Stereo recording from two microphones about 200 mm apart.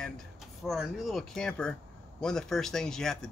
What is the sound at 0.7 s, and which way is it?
Speech, centre (ahead or behind).